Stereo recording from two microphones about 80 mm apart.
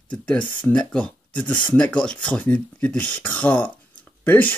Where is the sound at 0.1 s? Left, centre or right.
Centre.